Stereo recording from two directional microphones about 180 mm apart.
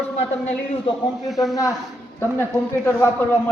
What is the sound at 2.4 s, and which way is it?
Speech, 10° left (ahead or behind).